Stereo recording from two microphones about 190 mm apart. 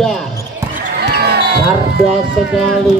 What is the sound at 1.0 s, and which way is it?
Music, 55° right (ahead or behind).